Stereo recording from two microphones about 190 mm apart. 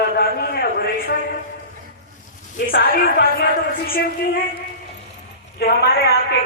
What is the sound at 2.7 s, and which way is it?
Speech, 50° left (ahead or behind).